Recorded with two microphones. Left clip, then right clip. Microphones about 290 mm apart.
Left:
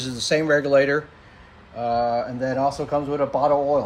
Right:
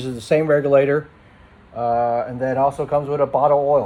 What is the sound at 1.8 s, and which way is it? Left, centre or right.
A man's voice, centre.